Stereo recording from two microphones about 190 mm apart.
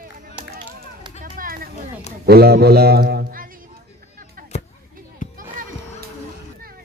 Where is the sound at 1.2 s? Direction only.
50° right (ahead or behind).